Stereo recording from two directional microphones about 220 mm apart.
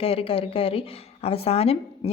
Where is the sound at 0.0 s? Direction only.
25° left (ahead or behind).